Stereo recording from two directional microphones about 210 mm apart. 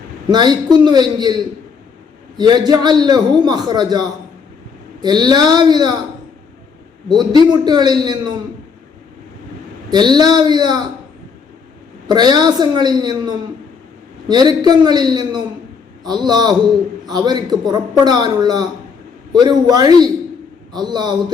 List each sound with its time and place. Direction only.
0.3 s a man's voice: 20° right (ahead or behind)
2.4 s a man's voice: 20° right (ahead or behind)
7.1 s a man's voice: 20° right (ahead or behind)
9.9 s a man's voice: 20° right (ahead or behind)
12.0 s a man's voice: 20° right (ahead or behind)